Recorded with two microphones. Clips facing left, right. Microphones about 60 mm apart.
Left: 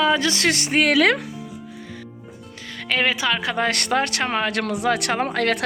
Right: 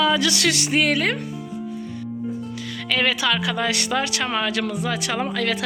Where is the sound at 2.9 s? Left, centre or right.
Left.